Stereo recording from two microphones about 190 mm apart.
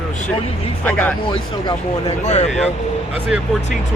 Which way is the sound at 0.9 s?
10° left (ahead or behind).